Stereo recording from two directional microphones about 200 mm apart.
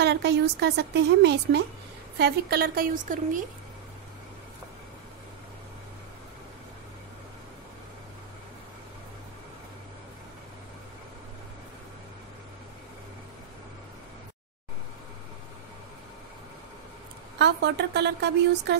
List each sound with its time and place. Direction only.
0.0 s a woman's voice: 55° right (ahead or behind); by 3.4 s 40° right (ahead or behind)
17.4 s a woman's voice: 55° right (ahead or behind)